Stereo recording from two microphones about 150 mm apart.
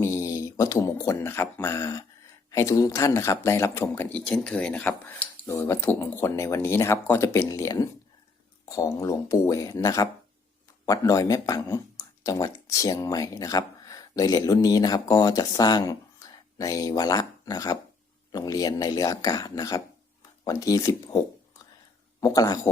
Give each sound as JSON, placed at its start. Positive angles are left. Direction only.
{"t": 0.0, "sound": "speech", "side_deg": 20}
{"t": 22.2, "sound": "speech", "side_deg": 25}